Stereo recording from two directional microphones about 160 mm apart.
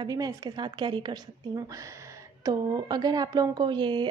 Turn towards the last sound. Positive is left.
turn(degrees=-30)  # may be behind; listen again after turning